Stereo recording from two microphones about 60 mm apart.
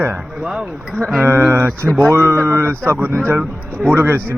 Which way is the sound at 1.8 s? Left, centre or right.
Centre.